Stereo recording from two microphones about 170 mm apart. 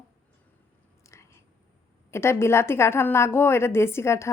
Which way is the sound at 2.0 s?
15° left (ahead or behind).